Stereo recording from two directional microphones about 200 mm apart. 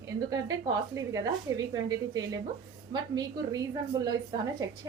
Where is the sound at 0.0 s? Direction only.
15° right (ahead or behind).